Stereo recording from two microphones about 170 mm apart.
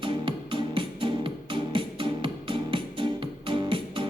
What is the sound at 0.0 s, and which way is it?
Music, 30° right (ahead or behind).